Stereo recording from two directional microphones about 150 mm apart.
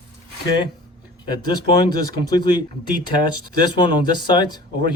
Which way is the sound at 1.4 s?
30° left (ahead or behind).